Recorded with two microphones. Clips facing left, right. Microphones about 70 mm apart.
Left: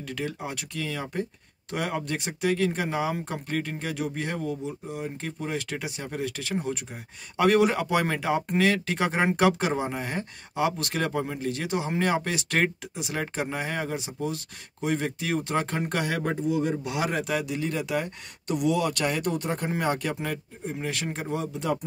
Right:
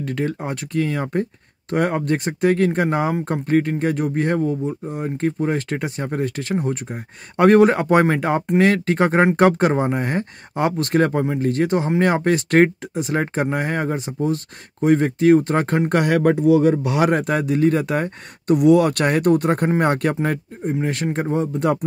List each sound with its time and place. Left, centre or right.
0.0 s speech: right
16.2 s speech: right
20.6 s speech: right